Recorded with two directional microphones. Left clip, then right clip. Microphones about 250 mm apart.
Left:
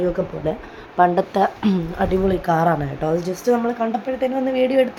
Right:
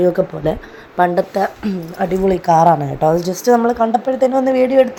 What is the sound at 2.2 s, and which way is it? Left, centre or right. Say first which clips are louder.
A woman's voice: right 9 dB; centre.